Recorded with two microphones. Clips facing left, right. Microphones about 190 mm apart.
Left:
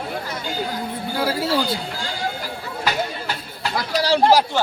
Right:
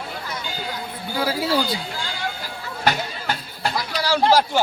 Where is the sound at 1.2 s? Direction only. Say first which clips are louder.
Even; centre (ahead or behind).